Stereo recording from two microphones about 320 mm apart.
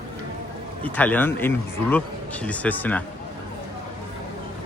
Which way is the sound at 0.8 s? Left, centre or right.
Centre.